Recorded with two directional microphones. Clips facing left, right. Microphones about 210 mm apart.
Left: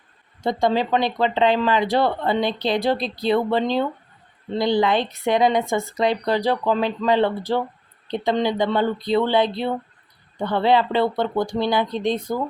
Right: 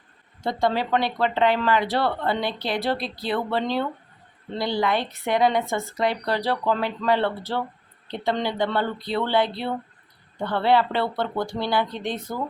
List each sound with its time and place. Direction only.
0.4 s speech: 15° left (ahead or behind)